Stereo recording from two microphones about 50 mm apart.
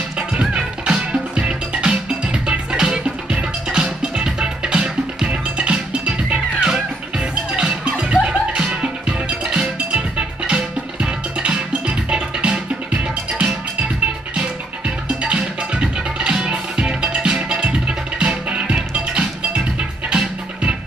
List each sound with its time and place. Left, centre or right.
0.3 s music: centre
6.6 s music: centre
7.5 s music: right
15.0 s music: right